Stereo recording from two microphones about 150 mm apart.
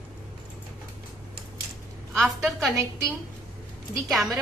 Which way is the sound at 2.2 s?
Centre (ahead or behind).